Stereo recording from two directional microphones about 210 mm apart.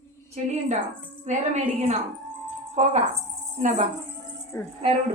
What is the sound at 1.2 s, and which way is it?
A woman's voice, 35° right (ahead or behind).